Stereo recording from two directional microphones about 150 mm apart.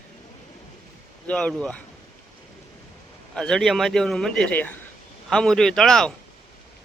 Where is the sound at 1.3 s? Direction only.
5° left (ahead or behind).